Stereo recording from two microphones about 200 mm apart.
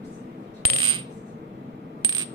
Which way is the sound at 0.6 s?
25° right (ahead or behind).